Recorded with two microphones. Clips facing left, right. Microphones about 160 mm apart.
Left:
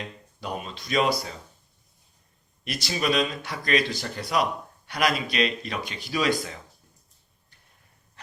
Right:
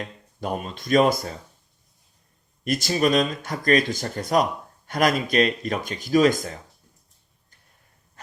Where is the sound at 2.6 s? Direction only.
45° right (ahead or behind).